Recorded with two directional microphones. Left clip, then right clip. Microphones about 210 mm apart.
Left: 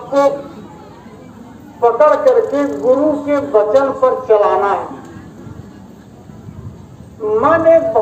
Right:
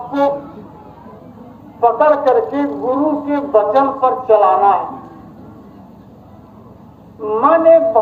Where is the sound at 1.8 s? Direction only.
50° left (ahead or behind).